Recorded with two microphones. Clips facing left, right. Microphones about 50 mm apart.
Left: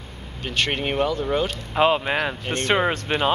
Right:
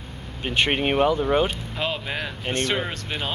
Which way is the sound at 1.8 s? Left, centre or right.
Left.